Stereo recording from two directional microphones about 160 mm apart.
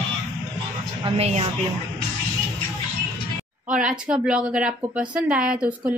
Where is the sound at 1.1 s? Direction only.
40° right (ahead or behind).